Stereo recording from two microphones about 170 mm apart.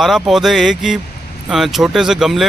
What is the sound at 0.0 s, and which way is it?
Speech, centre (ahead or behind).